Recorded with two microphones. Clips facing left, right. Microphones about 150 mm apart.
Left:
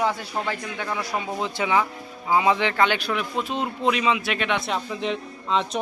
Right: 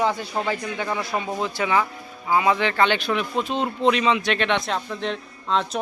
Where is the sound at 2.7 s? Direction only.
5° left (ahead or behind).